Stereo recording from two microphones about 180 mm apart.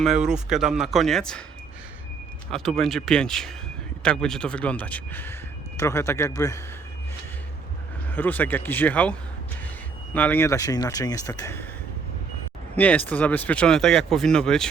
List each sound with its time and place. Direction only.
0.0 s speech: centre (ahead or behind)
2.5 s speech: centre (ahead or behind); by 6.6 s 15° left (ahead or behind)
8.1 s speech: 10° left (ahead or behind)
10.2 s speech: 10° left (ahead or behind)
12.7 s speech: 10° left (ahead or behind)